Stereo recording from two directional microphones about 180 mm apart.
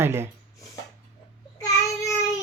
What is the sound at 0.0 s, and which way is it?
Speech, 15° right (ahead or behind).